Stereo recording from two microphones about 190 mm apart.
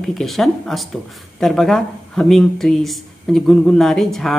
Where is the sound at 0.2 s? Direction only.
Centre (ahead or behind).